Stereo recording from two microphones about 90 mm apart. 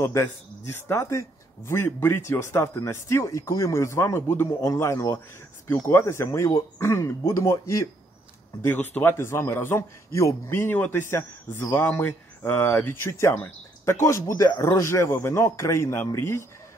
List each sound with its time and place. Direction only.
0.0 s a man's voice: 30° left (ahead or behind)
8.6 s a man's voice: 20° left (ahead or behind)